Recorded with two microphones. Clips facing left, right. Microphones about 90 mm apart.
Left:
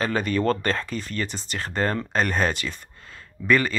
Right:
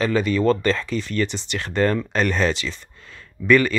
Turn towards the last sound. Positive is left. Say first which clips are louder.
# right 4 dB
turn(degrees=35)  # may be behind; listen again after turning